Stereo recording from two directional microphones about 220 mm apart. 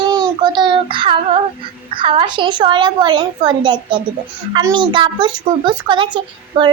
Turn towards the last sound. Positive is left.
turn(degrees=-20)  # may be behind; listen again after turning